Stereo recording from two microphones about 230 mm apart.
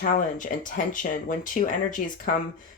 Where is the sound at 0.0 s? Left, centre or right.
Left.